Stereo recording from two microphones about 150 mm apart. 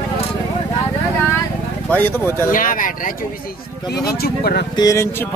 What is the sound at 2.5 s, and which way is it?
Speech, 65° left (ahead or behind).